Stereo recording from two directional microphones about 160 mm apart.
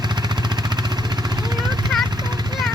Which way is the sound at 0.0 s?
25° right (ahead or behind).